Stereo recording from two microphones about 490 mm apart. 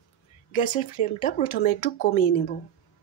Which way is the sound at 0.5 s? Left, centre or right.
Centre.